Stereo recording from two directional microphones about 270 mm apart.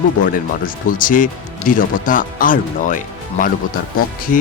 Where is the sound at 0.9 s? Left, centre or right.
Left.